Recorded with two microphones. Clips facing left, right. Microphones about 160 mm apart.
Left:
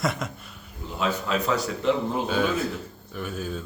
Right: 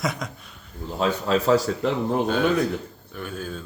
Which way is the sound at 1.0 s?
35° right (ahead or behind).